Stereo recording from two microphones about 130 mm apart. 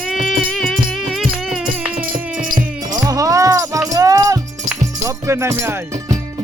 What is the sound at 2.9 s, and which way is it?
Music, 25° right (ahead or behind).